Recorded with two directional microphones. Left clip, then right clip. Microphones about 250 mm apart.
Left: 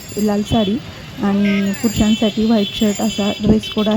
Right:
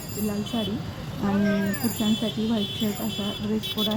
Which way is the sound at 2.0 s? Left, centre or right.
Left.